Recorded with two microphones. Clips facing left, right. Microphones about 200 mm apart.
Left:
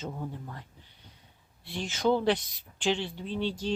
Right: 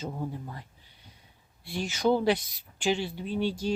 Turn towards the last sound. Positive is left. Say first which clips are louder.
# right 2 dB
turn(degrees=-10)  # may be behind; listen again after turning